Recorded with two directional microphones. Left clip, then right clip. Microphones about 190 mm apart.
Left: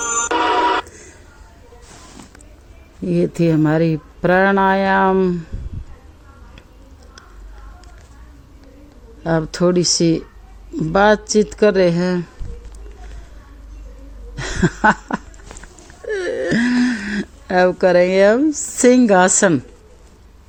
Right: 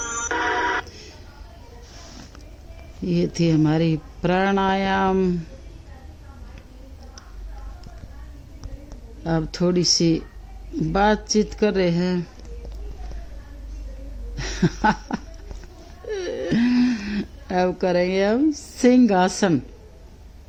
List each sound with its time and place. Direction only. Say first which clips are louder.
0.0 s music: left 6 dB; 50° left (ahead or behind)
3.4 s speech: left 4 dB; 15° left (ahead or behind)
9.2 s speech: left 6 dB; 15° left (ahead or behind)
14.3 s a sound: left 5 dB; 15° left (ahead or behind)
16.0 s wail: left 6 dB; 15° left (ahead or behind)